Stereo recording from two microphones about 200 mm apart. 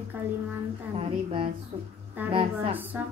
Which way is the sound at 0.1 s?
10° right (ahead or behind).